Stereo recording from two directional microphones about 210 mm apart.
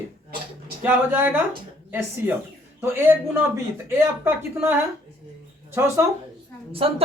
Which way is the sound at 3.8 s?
10° right (ahead or behind).